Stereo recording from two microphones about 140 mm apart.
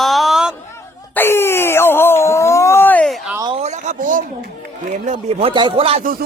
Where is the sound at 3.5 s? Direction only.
55° right (ahead or behind); by 4.2 s 70° right (ahead or behind).